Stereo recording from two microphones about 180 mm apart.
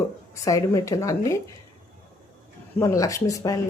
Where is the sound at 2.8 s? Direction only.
20° left (ahead or behind).